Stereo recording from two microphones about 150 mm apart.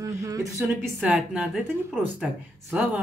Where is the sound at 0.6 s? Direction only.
10° right (ahead or behind).